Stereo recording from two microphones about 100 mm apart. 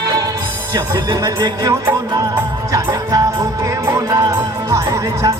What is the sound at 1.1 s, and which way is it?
Speech, 40° right (ahead or behind).